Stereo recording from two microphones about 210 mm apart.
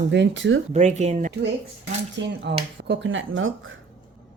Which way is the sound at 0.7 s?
35° right (ahead or behind).